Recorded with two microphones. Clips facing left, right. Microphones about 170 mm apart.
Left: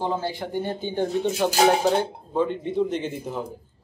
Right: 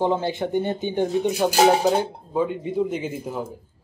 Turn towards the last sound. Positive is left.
turn(degrees=-10)  # may be behind; listen again after turning